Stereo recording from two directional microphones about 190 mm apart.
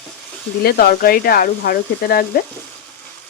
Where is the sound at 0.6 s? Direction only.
55° left (ahead or behind).